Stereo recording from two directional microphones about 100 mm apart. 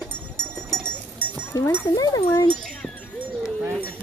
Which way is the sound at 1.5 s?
25° left (ahead or behind).